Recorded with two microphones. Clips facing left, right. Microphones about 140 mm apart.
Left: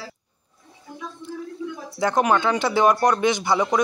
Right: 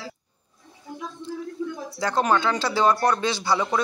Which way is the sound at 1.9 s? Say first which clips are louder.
Left 2 dB; 20° left (ahead or behind).